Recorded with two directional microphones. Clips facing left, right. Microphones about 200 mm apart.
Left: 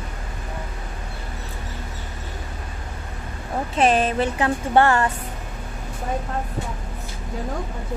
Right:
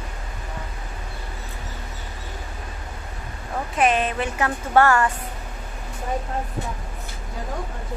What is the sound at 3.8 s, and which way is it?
Speech, 35° left (ahead or behind).